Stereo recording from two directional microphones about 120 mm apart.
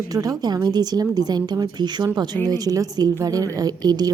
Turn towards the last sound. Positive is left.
turn(degrees=-35)  # may be behind; listen again after turning